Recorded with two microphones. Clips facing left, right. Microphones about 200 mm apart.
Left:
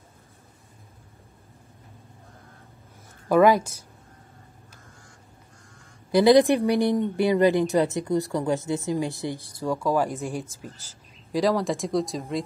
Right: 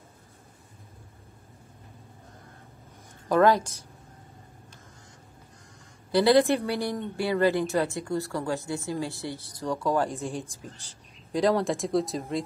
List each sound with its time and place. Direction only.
3.3 s speech: 10° left (ahead or behind)
6.1 s speech: 15° left (ahead or behind); by 12.4 s centre (ahead or behind)